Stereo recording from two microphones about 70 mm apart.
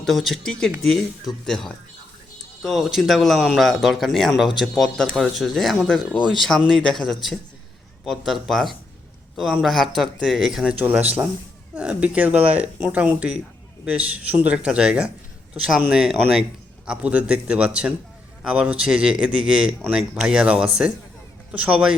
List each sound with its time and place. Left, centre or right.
0.0 s speech: centre
11.0 s a man's voice: right